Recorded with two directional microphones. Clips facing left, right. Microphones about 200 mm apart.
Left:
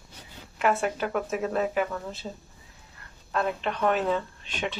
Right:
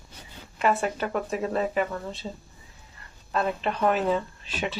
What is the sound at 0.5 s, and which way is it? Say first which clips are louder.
Speech: right 1 dB; centre (ahead or behind).